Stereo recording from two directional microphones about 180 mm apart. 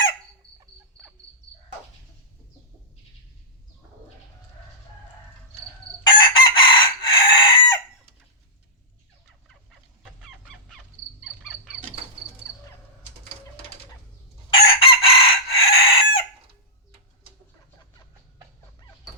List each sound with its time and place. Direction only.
6.0 s chicken: 25° left (ahead or behind)
14.5 s chicken: 30° left (ahead or behind)